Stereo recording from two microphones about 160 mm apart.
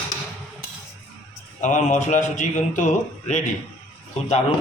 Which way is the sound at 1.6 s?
50° left (ahead or behind).